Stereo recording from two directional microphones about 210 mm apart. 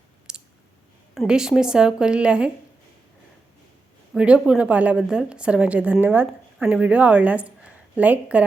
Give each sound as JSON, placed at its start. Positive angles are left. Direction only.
{"t": 0.3, "sound": "clicking", "side_deg": -5}
{"t": 1.1, "sound": "a woman's voice", "side_deg": 0}
{"t": 4.1, "sound": "a woman's voice", "side_deg": -5}